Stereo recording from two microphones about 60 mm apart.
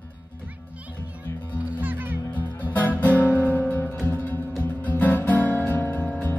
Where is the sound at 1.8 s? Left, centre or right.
Right.